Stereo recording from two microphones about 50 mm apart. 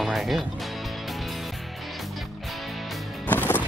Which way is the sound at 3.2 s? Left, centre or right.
Left.